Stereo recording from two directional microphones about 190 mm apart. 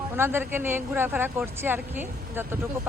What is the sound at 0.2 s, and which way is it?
Speech, 10° right (ahead or behind).